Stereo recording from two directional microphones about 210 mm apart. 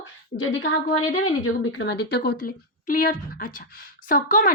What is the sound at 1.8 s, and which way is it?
A woman's voice, 55° left (ahead or behind).